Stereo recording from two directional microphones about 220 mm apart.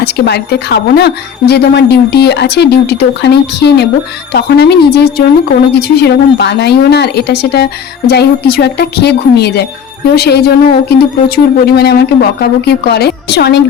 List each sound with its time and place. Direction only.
0.0 s speech: 50° left (ahead or behind)